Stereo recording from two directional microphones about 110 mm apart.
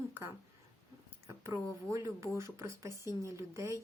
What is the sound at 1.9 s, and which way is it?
Speech, 25° right (ahead or behind).